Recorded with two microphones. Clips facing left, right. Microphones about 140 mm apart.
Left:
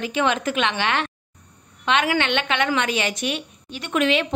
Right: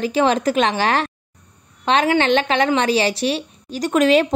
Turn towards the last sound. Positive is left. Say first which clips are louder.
# right 6 dB
turn(degrees=-40)  # may be behind; listen again after turning